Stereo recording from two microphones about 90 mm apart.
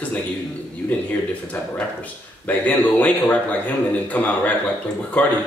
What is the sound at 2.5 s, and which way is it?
Speech, 20° left (ahead or behind).